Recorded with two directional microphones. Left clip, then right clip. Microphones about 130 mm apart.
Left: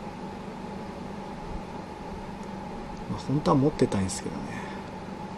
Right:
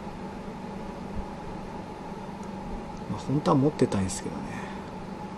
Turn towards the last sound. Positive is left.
turn(degrees=10)  # may be behind; listen again after turning